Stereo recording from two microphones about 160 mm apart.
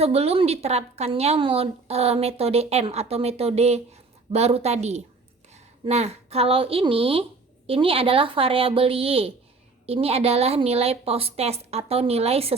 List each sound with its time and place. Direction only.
0.0 s a woman's voice: 40° right (ahead or behind)